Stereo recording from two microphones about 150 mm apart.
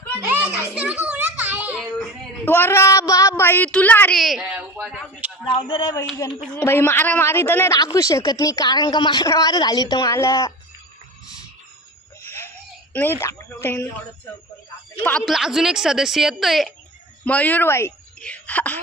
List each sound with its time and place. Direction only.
0.3 s children playing: 10° right (ahead or behind)
1.8 s speech: 10° left (ahead or behind)
4.2 s a woman's voice: centre (ahead or behind)
4.5 s a sound: centre (ahead or behind)
5.5 s speech: 35° left (ahead or behind)
6.5 s a man's voice: 15° left (ahead or behind)
12.9 s a man's voice: 15° left (ahead or behind)
15.0 s a woman's voice: 5° left (ahead or behind)
17.2 s a man's voice: 10° left (ahead or behind)